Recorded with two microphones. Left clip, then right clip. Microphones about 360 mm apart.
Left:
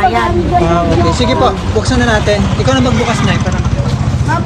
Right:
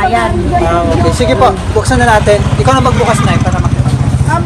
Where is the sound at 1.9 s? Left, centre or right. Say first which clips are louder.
Right 5 dB; centre.